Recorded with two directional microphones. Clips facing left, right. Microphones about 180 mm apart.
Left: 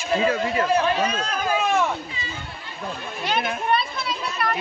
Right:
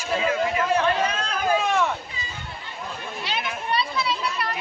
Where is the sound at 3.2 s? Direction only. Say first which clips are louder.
Left 6 dB; 50° left (ahead or behind).